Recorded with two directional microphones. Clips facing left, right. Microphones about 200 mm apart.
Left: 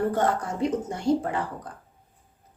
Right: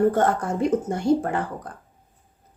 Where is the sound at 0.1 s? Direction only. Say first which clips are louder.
Right 3 dB; 50° right (ahead or behind).